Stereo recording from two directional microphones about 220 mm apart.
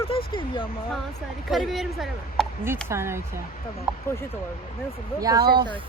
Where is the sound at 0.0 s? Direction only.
25° left (ahead or behind).